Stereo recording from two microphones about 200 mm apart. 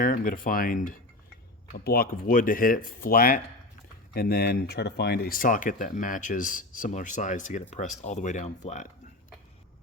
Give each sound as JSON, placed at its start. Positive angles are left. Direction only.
{"t": 0.0, "sound": "speech", "side_deg": 45}